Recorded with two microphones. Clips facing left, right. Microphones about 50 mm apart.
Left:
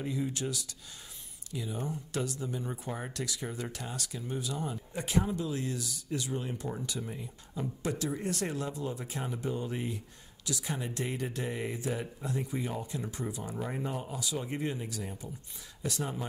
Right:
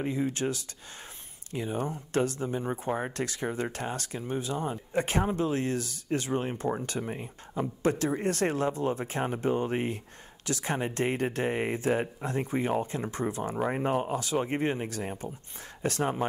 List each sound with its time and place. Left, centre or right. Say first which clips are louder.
0.0 s speech: right 5 dB; right